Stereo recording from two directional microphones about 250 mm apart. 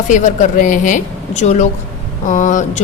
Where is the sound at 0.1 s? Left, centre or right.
Left.